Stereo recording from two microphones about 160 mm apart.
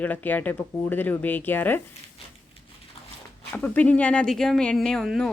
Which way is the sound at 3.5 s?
10° left (ahead or behind).